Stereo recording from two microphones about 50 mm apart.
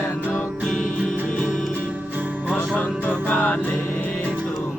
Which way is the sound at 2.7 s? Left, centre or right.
Left.